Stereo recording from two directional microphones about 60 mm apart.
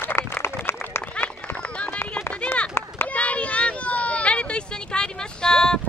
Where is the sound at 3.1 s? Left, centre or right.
Left.